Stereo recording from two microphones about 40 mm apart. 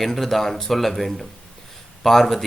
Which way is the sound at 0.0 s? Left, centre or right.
Centre.